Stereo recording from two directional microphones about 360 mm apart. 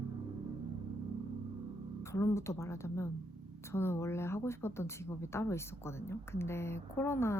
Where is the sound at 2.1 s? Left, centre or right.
Centre.